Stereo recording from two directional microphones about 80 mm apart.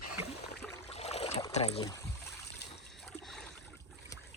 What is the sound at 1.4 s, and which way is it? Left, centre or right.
Boat, left.